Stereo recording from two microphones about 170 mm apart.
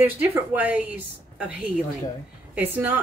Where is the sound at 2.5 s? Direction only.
10° right (ahead or behind).